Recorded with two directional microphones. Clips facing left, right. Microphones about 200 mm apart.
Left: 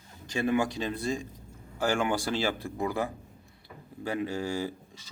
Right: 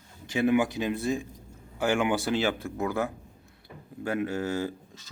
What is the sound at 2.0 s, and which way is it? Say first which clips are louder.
Speech: right 3 dB; 15° right (ahead or behind).